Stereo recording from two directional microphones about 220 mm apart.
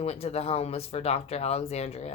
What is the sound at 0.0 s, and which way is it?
Speech, 30° left (ahead or behind).